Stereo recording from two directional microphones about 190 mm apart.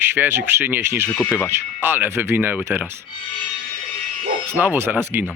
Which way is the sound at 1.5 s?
10° right (ahead or behind).